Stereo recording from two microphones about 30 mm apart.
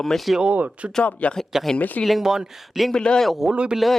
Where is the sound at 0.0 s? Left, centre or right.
Centre.